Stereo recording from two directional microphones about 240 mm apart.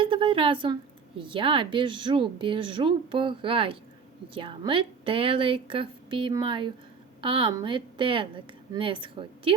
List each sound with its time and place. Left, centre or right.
0.0 s a woman's voice: right